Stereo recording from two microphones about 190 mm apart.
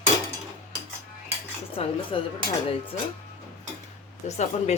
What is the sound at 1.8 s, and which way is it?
Speech, 30° left (ahead or behind).